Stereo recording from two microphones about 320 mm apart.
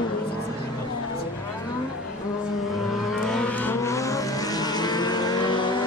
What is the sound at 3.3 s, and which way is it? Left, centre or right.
Vehicle, centre.